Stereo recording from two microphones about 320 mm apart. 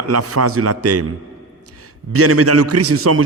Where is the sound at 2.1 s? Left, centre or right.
Right.